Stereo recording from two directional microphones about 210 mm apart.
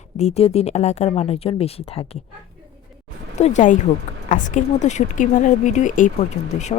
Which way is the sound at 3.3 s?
35° left (ahead or behind).